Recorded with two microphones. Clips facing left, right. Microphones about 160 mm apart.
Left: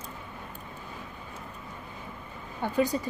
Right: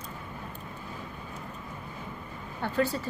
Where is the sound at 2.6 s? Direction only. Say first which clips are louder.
Left 2 dB; 15° left (ahead or behind).